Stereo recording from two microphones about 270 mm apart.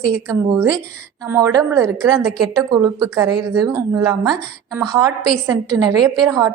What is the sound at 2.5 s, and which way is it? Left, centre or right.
A woman's voice, centre.